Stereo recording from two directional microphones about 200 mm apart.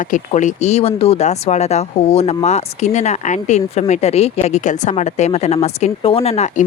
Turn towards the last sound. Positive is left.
turn(degrees=30)  # may be behind; listen again after turning